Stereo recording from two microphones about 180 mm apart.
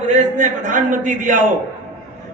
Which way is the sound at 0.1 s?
45° right (ahead or behind).